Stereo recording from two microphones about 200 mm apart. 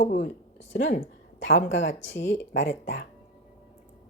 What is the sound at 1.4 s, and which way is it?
Speech, 70° left (ahead or behind).